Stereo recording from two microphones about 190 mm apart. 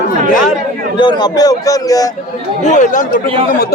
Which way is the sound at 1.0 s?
20° left (ahead or behind).